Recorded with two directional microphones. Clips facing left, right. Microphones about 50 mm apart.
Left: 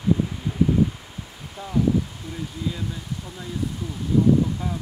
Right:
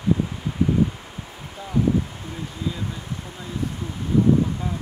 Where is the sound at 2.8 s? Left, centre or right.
Right.